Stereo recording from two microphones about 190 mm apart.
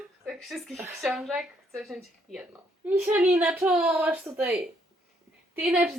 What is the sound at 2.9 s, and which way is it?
A woman's voice, 10° right (ahead or behind).